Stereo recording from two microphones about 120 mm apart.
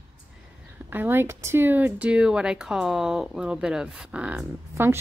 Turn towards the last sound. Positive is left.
turn(degrees=-20)  # may be behind; listen again after turning